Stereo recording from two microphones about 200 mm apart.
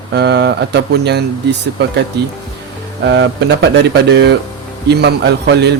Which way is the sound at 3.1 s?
60° right (ahead or behind).